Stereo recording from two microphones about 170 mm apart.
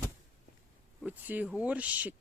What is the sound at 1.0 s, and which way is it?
Speech, 10° right (ahead or behind).